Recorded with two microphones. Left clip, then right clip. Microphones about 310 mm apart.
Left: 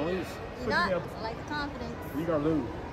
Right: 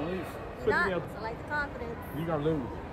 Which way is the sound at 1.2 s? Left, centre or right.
Centre.